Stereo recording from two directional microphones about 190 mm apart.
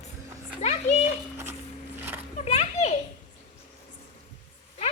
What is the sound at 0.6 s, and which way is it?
Speech, 35° left (ahead or behind).